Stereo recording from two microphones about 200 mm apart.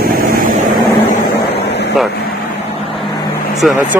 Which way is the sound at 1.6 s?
60° left (ahead or behind).